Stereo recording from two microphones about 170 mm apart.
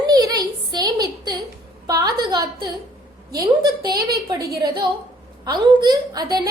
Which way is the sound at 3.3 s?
25° right (ahead or behind).